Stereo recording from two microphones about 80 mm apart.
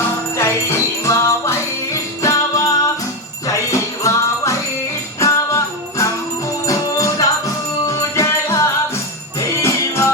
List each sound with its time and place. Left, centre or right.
0.3 s jingle bell: left
3.4 s music: left
9.6 s music: left